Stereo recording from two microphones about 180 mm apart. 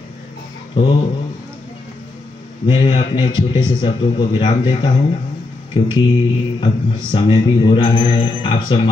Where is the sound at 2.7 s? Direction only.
25° left (ahead or behind).